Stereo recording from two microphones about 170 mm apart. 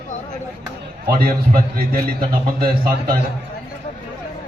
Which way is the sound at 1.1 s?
60° right (ahead or behind).